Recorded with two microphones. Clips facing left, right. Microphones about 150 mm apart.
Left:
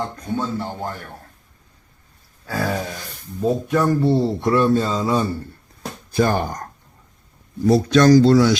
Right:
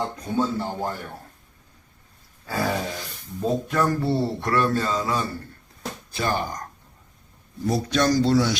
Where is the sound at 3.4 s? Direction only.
10° left (ahead or behind); by 5.2 s 30° left (ahead or behind).